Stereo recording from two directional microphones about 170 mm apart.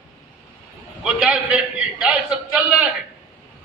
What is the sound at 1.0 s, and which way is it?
A man's voice, 5° right (ahead or behind).